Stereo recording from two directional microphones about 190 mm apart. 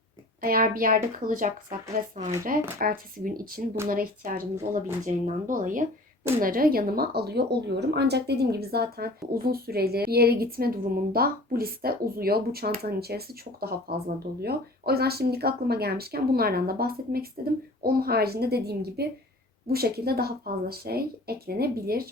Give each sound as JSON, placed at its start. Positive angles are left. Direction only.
{"t": 0.4, "sound": "a woman's voice", "side_deg": -50}